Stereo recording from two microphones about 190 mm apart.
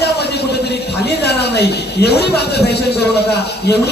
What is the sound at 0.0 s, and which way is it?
A woman's voice, 60° left (ahead or behind).